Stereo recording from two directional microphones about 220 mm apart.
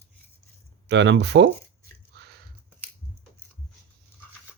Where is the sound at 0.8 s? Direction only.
55° right (ahead or behind).